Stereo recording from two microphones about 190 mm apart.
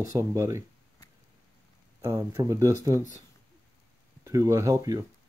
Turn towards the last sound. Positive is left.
turn(degrees=-20)  # may be behind; listen again after turning